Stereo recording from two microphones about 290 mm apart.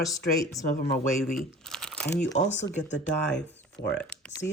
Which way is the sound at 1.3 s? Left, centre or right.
Centre.